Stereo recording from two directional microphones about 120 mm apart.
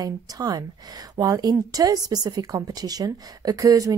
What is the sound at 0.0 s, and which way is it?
A woman's voice, 30° right (ahead or behind).